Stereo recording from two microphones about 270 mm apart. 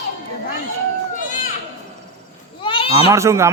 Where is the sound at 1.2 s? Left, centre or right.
Left.